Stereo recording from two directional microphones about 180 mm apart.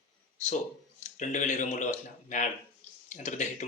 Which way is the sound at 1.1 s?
45° left (ahead or behind).